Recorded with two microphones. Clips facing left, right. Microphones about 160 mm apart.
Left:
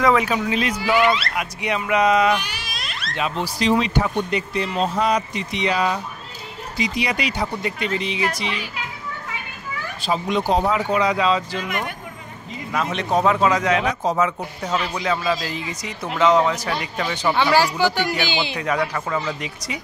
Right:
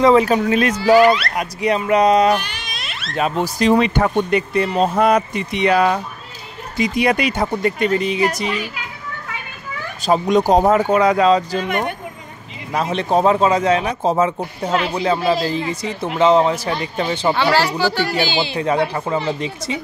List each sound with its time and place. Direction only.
0.0 s speech: 35° right (ahead or behind)
1.3 s speech: 35° right (ahead or behind)
2.4 s a sound: 5° left (ahead or behind)
3.2 s speech: 45° right (ahead or behind)
10.0 s speech: 45° right (ahead or behind)
17.4 s speech: 15° left (ahead or behind)
18.6 s speech: 30° right (ahead or behind)